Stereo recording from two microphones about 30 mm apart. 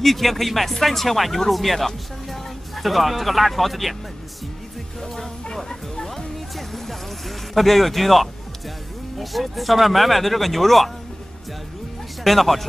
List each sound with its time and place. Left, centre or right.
0.0 s speech: centre
5.0 s music: centre
9.2 s speech: centre
12.2 s speech: centre